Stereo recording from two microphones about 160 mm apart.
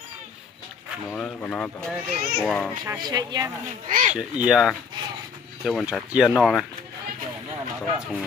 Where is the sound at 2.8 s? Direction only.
25° right (ahead or behind).